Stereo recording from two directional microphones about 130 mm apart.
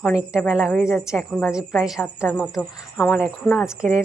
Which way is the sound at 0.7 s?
15° left (ahead or behind).